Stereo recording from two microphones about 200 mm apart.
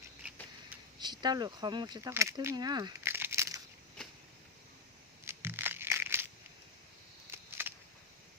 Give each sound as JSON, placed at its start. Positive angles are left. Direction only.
{"t": 0.9, "sound": "speech", "side_deg": -20}
{"t": 5.2, "sound": "crushing", "side_deg": -10}
{"t": 7.3, "sound": "a sound", "side_deg": -10}